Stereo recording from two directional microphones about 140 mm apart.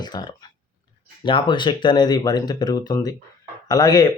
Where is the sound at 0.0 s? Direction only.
30° left (ahead or behind).